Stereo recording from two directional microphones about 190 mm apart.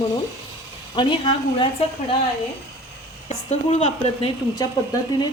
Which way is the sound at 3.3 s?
35° left (ahead or behind).